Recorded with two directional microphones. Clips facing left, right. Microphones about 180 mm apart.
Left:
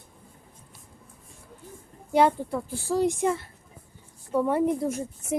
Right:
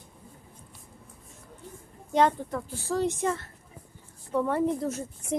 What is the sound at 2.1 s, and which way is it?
Speech, 10° left (ahead or behind).